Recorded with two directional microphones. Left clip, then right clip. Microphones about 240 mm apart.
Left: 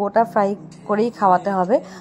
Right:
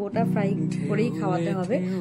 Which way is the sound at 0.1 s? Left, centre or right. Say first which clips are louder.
Left 10 dB; centre.